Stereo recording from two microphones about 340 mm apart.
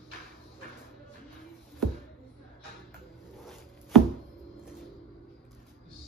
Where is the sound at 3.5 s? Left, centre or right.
Centre.